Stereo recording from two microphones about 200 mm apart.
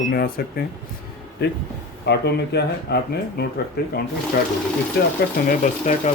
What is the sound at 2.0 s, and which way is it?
Speech, 55° left (ahead or behind).